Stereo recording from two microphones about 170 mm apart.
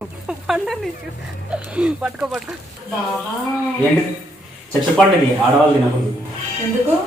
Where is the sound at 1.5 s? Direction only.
5° right (ahead or behind).